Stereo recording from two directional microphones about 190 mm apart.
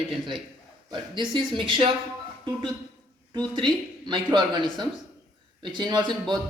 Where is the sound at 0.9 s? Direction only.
25° right (ahead or behind).